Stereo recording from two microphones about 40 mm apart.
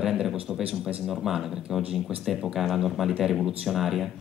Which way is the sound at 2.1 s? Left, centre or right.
Right.